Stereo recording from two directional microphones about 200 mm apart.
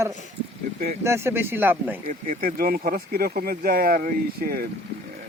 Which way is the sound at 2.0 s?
40° right (ahead or behind).